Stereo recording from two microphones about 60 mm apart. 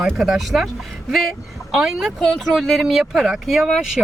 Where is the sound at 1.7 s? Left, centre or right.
Centre.